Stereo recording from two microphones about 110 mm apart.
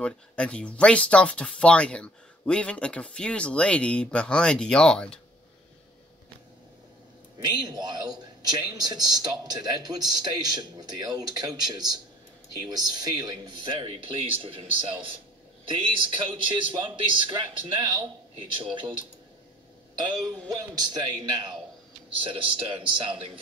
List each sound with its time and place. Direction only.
0.0 s speech: 10° left (ahead or behind)
7.4 s a man's voice: 40° right (ahead or behind)
20.0 s a man's voice: 40° right (ahead or behind)